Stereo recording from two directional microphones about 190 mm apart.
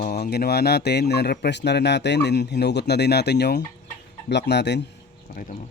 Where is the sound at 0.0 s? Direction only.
55° left (ahead or behind).